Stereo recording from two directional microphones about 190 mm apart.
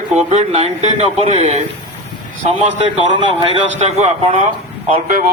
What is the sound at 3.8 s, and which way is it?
A man's voice, 35° right (ahead or behind).